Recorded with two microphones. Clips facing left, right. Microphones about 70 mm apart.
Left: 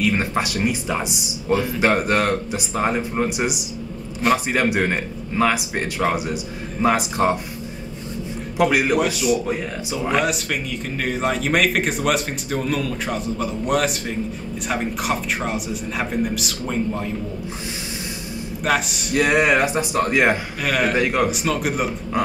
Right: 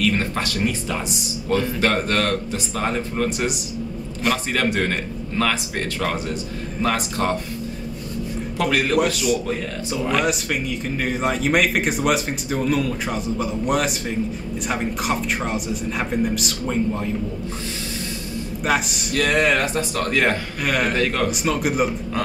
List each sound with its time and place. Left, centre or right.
0.0 s speech: centre
8.5 s speech: centre
9.0 s a man's voice: centre
9.5 s speech: centre
10.1 s a man's voice: centre
18.7 s a man's voice: centre
19.1 s speech: centre
20.6 s a man's voice: centre
20.9 s speech: centre
21.3 s a man's voice: centre